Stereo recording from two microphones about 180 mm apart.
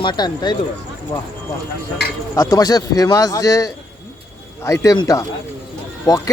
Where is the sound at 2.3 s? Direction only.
20° left (ahead or behind).